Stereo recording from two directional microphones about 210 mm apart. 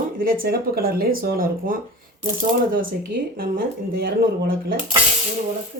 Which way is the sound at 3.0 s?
45° right (ahead or behind).